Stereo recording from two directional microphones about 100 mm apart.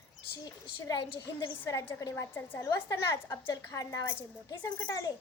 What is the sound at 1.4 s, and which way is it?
A woman's voice, 30° left (ahead or behind).